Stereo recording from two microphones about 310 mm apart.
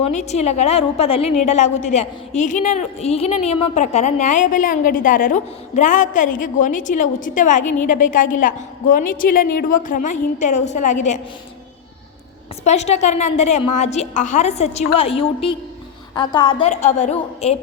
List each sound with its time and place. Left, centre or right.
0.1 s a woman's voice: left
7.6 s a woman's voice: left
7.9 s a woman's voice: left
12.6 s a woman's voice: left